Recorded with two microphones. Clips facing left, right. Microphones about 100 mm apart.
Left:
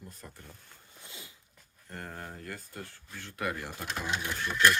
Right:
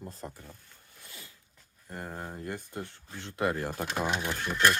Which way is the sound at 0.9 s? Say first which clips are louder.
Left 1 dB; 20° left (ahead or behind).